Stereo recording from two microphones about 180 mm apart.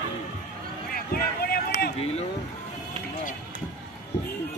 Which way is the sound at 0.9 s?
55° left (ahead or behind).